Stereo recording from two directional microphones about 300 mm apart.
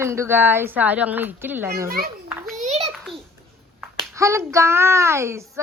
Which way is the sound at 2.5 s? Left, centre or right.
Right.